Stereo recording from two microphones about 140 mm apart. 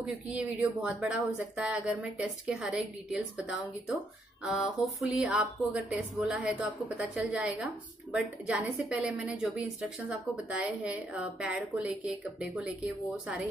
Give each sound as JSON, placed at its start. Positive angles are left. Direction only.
{"t": 0.0, "sound": "speech", "side_deg": -10}